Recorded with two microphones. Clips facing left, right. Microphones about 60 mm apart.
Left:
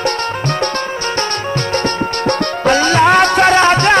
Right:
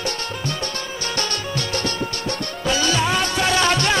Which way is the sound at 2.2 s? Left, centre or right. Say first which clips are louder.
Left 13 dB; left.